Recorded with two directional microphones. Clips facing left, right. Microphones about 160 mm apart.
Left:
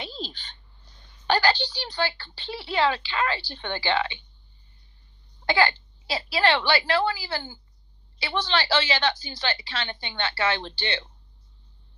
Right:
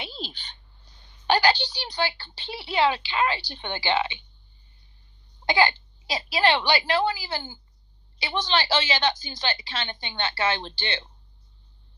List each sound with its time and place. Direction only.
1.3 s a sound: 15° right (ahead or behind)
2.5 s a woman's voice: 15° right (ahead or behind)
5.5 s a woman's voice: 20° right (ahead or behind)